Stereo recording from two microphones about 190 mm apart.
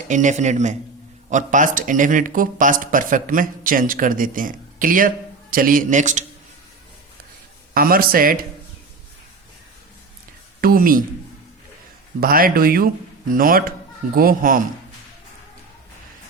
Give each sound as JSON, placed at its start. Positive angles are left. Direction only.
{"t": 0.1, "sound": "a man's voice", "side_deg": -40}
{"t": 7.7, "sound": "speech", "side_deg": -50}
{"t": 10.6, "sound": "speech", "side_deg": -50}
{"t": 12.2, "sound": "speech", "side_deg": -50}